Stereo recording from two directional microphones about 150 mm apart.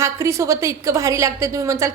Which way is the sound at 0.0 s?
20° right (ahead or behind).